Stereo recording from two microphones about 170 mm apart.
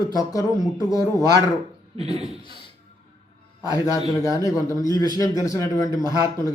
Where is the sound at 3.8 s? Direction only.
20° left (ahead or behind).